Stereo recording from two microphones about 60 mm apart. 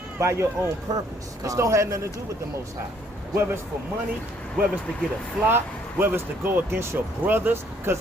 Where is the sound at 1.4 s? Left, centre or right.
Right.